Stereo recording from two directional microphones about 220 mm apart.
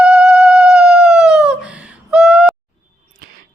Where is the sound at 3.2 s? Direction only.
45° right (ahead or behind).